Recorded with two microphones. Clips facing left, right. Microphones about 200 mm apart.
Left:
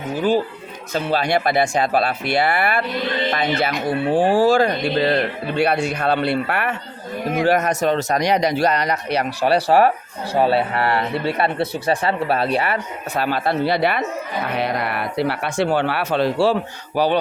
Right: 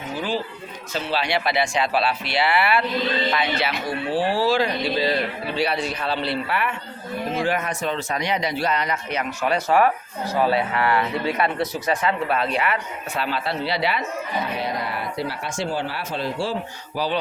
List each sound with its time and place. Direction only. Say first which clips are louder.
0.2 s a man's voice: left 9 dB; 55° left (ahead or behind); by 13.2 s 35° left (ahead or behind)
13.2 s speech: left 7 dB; 50° left (ahead or behind)